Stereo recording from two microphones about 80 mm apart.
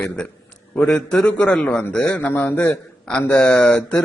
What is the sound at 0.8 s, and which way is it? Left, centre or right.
A man's voice, centre.